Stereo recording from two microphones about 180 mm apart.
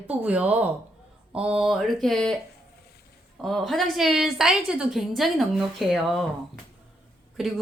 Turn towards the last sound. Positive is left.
turn(degrees=0)  # may be behind; listen again after turning